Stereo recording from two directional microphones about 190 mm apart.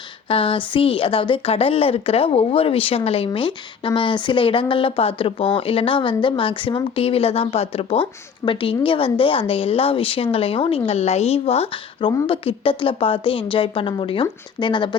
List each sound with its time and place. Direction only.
0.3 s speech: 30° left (ahead or behind)